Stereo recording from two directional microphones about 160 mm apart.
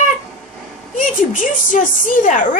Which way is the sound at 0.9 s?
55° left (ahead or behind).